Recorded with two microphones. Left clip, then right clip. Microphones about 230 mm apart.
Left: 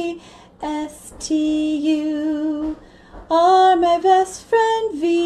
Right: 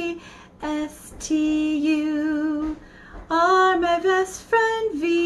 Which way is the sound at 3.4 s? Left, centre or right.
Right.